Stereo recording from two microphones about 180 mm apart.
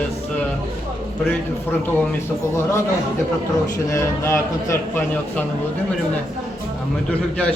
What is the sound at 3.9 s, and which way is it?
A man's voice, 15° left (ahead or behind).